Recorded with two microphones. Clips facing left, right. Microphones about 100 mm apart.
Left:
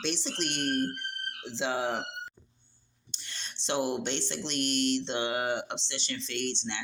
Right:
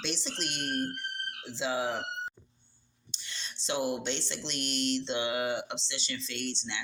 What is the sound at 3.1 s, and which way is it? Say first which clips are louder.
Speech: even; 50° left (ahead or behind).